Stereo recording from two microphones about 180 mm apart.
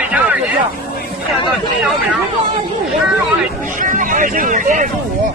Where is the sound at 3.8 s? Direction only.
45° right (ahead or behind).